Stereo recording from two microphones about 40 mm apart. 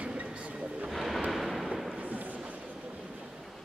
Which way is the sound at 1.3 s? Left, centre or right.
Centre.